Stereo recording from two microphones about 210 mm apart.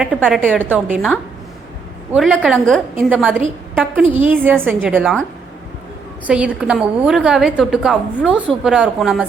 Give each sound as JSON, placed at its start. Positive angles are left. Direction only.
{"t": 0.0, "sound": "a woman's voice", "side_deg": 0}
{"t": 6.2, "sound": "a woman's voice", "side_deg": -5}